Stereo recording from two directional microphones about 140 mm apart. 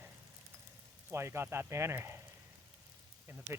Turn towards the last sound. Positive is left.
turn(degrees=-15)  # may be behind; listen again after turning